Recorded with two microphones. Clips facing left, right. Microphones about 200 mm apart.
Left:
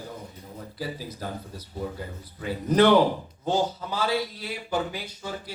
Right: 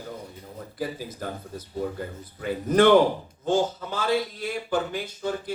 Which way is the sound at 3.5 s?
50° right (ahead or behind).